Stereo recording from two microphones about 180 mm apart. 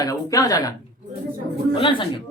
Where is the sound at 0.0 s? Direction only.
20° left (ahead or behind).